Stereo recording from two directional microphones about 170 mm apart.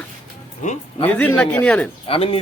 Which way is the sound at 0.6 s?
45° left (ahead or behind).